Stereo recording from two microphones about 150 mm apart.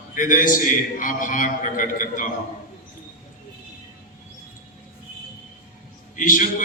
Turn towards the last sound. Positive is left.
turn(degrees=60)  # may be behind; listen again after turning